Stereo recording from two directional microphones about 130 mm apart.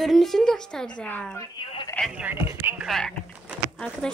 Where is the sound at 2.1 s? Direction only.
15° right (ahead or behind).